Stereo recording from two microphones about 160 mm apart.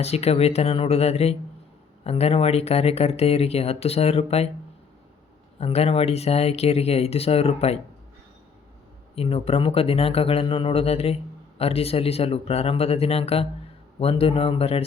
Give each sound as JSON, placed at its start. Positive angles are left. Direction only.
{"t": 0.0, "sound": "speech", "side_deg": 40}
{"t": 5.5, "sound": "speech", "side_deg": 40}
{"t": 9.1, "sound": "speech", "side_deg": 35}